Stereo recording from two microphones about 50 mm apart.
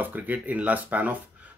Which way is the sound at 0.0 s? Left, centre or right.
Right.